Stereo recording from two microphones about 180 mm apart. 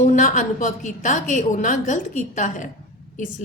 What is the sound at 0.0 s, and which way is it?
A woman's voice, 45° left (ahead or behind).